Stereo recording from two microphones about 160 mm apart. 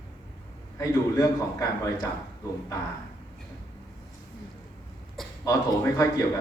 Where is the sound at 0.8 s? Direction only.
20° left (ahead or behind).